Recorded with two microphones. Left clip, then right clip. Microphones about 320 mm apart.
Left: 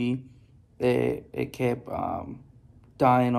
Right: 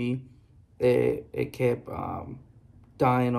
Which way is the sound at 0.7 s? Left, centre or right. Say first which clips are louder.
Right 2 dB; centre.